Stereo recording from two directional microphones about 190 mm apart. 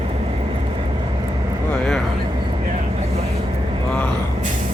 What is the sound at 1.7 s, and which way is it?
Speech, centre (ahead or behind).